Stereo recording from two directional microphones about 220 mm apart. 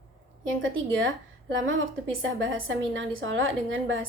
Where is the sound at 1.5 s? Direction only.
60° right (ahead or behind).